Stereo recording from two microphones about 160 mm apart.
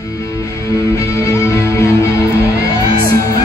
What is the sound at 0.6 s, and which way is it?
Music, 20° left (ahead or behind).